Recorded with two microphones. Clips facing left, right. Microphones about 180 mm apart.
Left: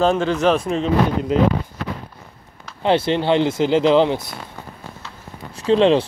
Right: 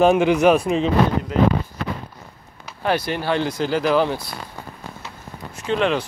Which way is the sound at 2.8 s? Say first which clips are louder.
Left 5 dB; 25° left (ahead or behind).